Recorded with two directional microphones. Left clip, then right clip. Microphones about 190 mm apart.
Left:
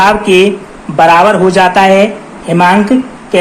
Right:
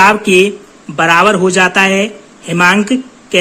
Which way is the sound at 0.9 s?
50° right (ahead or behind).